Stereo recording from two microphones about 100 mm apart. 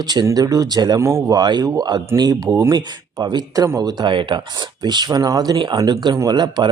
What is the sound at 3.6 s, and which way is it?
Speech, 30° right (ahead or behind).